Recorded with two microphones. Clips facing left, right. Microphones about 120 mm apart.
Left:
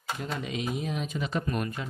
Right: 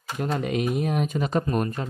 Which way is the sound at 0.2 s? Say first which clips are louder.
Right 10 dB; 55° right (ahead or behind).